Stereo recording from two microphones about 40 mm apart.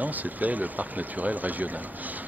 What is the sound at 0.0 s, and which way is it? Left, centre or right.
Speech, right.